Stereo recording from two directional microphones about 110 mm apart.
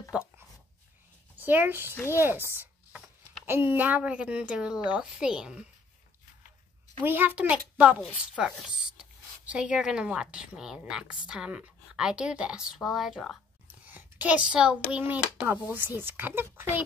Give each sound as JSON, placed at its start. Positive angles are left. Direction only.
{"t": 0.1, "sound": "a woman's voice", "side_deg": -10}
{"t": 1.4, "sound": "speech", "side_deg": -20}
{"t": 2.1, "sound": "chopping", "side_deg": -20}
{"t": 3.4, "sound": "a woman's voice", "side_deg": -20}
{"t": 7.0, "sound": "a woman's voice", "side_deg": -20}
{"t": 13.8, "sound": "a woman's voice", "side_deg": -15}